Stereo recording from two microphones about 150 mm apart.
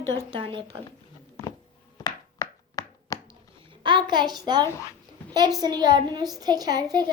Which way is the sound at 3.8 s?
30° right (ahead or behind).